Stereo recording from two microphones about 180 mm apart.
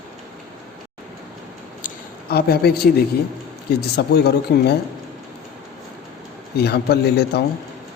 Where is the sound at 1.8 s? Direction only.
55° left (ahead or behind).